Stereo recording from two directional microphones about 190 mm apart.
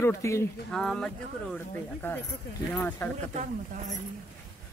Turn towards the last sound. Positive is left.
turn(degrees=-40)  # may be behind; listen again after turning